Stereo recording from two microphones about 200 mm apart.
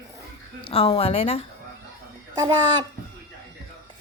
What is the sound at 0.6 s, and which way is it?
Speech, 30° left (ahead or behind).